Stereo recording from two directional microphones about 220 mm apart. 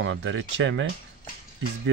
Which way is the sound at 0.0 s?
60° right (ahead or behind).